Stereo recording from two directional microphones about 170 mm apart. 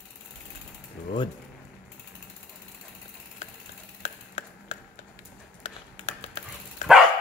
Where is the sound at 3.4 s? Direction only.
45° left (ahead or behind).